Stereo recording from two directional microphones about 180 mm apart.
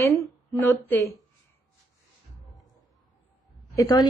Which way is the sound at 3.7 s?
20° left (ahead or behind).